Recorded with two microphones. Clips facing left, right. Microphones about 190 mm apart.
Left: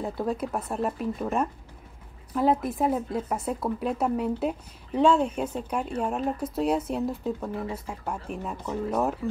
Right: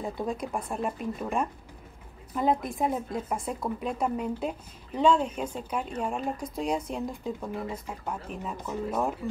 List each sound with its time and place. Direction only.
0.0 s a woman's voice: 5° left (ahead or behind)